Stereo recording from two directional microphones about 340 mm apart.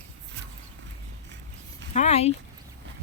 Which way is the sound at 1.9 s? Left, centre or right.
Centre.